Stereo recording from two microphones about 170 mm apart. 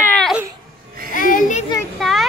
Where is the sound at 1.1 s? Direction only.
50° left (ahead or behind).